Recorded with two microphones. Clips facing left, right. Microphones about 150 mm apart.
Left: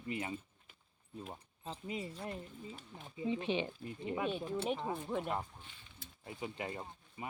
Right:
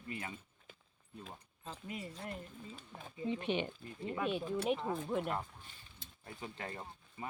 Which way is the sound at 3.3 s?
25° left (ahead or behind).